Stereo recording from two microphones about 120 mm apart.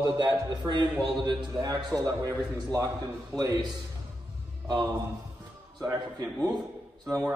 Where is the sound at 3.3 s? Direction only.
30° right (ahead or behind).